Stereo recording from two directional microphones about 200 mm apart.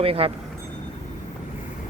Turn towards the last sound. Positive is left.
turn(degrees=-30)  # may be behind; listen again after turning